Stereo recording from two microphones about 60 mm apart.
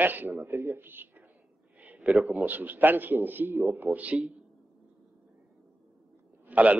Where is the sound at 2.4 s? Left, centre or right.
Right.